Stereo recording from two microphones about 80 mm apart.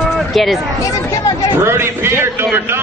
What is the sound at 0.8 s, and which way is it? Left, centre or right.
Speech, left.